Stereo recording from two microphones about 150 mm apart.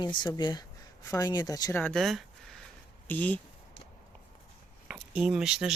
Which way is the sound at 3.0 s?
10° left (ahead or behind).